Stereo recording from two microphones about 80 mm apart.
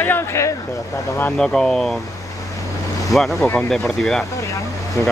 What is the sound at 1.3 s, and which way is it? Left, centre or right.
Speech, centre.